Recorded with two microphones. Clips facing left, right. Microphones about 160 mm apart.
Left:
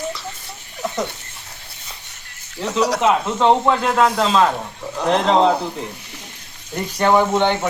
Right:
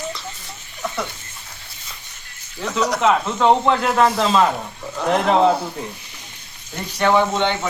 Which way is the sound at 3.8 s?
Centre (ahead or behind).